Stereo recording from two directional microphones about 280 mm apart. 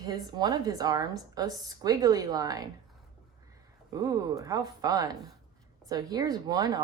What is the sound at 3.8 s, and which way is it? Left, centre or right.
A woman's voice, centre.